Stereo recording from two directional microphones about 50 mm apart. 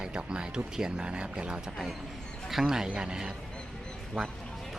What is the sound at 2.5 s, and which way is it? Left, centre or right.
Speech, centre.